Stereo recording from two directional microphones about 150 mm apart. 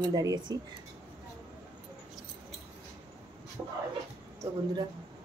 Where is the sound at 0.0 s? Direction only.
25° right (ahead or behind).